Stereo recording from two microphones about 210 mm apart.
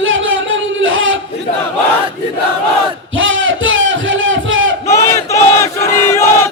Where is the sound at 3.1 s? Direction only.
70° right (ahead or behind).